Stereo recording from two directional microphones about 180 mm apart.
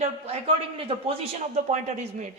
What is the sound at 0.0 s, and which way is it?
A man's voice, 35° right (ahead or behind).